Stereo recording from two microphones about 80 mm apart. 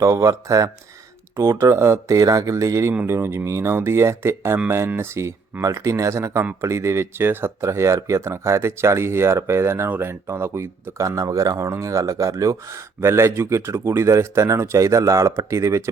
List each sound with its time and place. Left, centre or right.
0.0 s speech: right
3.1 s speech: right